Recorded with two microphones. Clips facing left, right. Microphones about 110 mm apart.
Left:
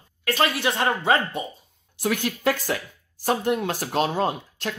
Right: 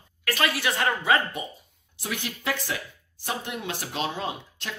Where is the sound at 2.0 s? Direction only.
50° left (ahead or behind).